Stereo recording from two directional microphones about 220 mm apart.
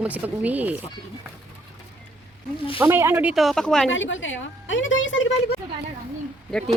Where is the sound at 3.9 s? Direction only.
60° left (ahead or behind).